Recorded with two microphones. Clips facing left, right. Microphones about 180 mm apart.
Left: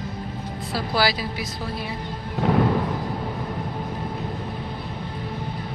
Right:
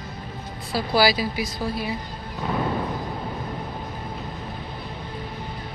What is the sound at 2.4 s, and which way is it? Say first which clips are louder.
Music: left 6 dB; 80° left.